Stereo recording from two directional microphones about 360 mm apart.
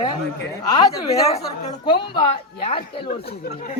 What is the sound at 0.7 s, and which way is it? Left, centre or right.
A woman's voice, centre.